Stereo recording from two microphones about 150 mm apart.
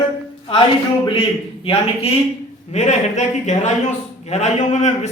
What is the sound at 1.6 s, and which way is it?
A man's voice, 40° left (ahead or behind).